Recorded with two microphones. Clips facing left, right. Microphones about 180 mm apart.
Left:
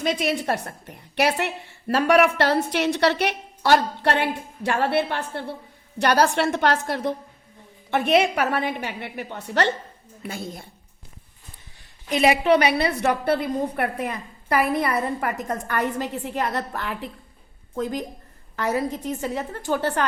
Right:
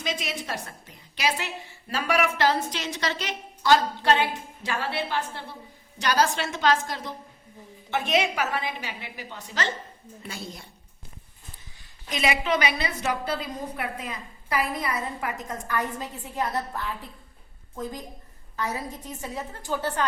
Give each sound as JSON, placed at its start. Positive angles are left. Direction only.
{"t": 0.0, "sound": "a woman's voice", "side_deg": 60}
{"t": 12.1, "sound": "a woman's voice", "side_deg": 60}